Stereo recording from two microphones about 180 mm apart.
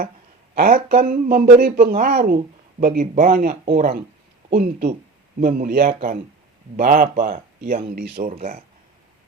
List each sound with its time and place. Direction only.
0.5 s speech: 55° right (ahead or behind)
8.2 s speech: 35° right (ahead or behind)